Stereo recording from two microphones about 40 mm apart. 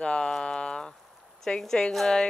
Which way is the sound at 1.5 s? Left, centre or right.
Left.